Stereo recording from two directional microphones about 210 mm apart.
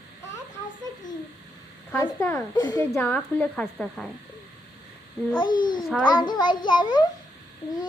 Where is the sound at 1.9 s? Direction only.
15° left (ahead or behind).